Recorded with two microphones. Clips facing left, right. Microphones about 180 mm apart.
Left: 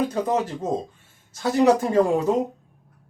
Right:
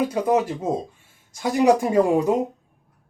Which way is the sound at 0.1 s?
10° right (ahead or behind).